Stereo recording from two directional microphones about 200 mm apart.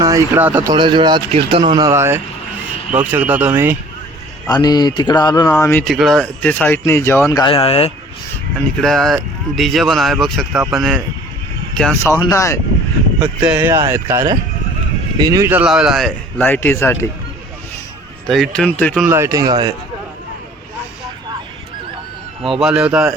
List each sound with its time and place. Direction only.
0.0 s speech: 15° right (ahead or behind)
0.7 s speech: 20° right (ahead or behind)
4.4 s speech: 20° left (ahead or behind)
5.5 s speech: 5° left (ahead or behind); by 7.9 s 30° left (ahead or behind)
8.8 s speech: centre (ahead or behind)
12.2 s speech: 15° left (ahead or behind)
13.4 s speech: 10° right (ahead or behind); by 17.1 s 10° left (ahead or behind)
18.3 s speech: centre (ahead or behind)
19.0 s speech: 15° right (ahead or behind)
22.4 s speech: 5° right (ahead or behind)